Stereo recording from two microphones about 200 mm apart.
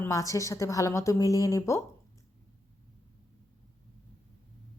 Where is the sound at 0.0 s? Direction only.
15° left (ahead or behind).